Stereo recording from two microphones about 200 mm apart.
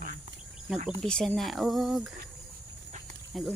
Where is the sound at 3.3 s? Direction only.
Centre (ahead or behind).